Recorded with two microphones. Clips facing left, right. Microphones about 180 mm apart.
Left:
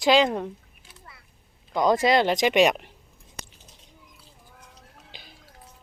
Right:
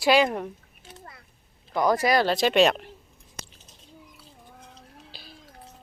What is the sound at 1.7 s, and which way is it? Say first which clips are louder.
Speech: left 2 dB; 20° left (ahead or behind).